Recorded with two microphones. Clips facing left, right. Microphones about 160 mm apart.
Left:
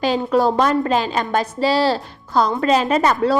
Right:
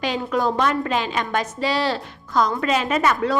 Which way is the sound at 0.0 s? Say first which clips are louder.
Left 5 dB; 35° left (ahead or behind).